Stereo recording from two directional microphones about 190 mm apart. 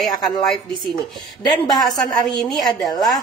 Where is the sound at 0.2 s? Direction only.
Centre (ahead or behind).